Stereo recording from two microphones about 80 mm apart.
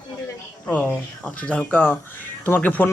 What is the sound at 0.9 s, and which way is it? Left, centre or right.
Speech, centre.